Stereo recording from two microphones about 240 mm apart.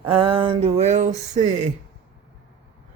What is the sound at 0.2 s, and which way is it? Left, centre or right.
Speech, right.